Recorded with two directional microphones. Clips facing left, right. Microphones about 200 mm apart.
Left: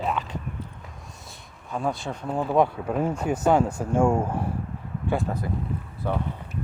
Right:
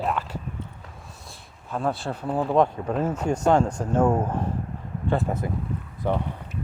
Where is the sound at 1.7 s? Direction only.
Centre (ahead or behind).